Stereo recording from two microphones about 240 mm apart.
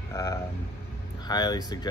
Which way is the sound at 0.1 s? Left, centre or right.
Centre.